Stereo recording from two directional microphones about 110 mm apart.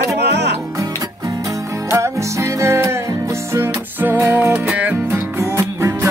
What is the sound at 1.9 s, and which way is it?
Music, 25° right (ahead or behind).